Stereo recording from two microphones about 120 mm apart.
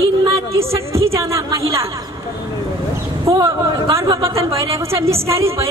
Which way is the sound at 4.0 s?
25° right (ahead or behind).